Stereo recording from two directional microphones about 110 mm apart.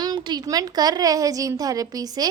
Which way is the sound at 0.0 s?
40° right (ahead or behind).